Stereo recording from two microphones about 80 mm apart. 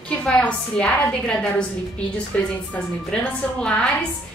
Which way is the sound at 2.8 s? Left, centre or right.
Centre.